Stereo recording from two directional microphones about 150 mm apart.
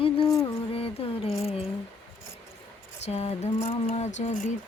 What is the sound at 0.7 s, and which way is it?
Music, 40° left (ahead or behind).